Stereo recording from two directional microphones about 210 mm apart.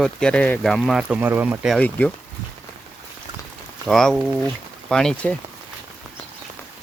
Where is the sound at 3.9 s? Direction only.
Centre (ahead or behind).